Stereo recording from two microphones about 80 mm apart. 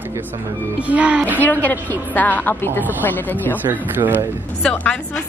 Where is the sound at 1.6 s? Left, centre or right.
Left.